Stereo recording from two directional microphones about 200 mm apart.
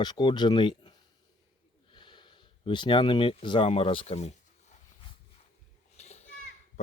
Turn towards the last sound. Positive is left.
turn(degrees=35)  # may be behind; listen again after turning